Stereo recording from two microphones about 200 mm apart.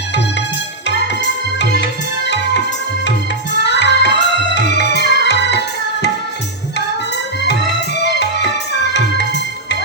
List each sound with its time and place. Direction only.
1.5 s tabla: 60° left (ahead or behind)
3.6 s music: 60° left (ahead or behind)
8.0 s music: 60° left (ahead or behind)